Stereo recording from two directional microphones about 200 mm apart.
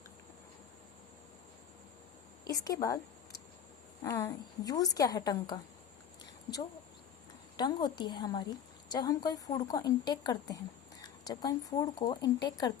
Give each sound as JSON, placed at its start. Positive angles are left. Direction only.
{"t": 2.4, "sound": "a sound", "side_deg": 20}
{"t": 4.0, "sound": "speech", "side_deg": 15}
{"t": 7.5, "sound": "a woman's voice", "side_deg": 20}